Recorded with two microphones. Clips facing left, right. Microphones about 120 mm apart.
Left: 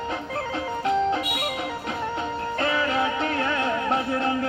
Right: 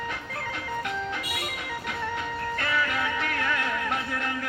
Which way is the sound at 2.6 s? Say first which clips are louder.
Left 6 dB; 30° left (ahead or behind).